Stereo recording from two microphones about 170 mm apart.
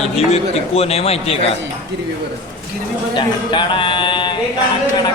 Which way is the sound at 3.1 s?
30° left (ahead or behind).